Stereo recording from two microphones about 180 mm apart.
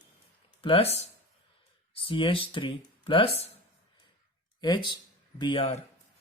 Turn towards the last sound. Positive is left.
turn(degrees=25)  # may be behind; listen again after turning